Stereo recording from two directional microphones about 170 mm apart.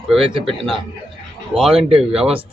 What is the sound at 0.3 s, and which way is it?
Speech, 30° right (ahead or behind).